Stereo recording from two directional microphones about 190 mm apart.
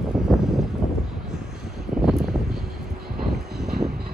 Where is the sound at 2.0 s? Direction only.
Centre (ahead or behind).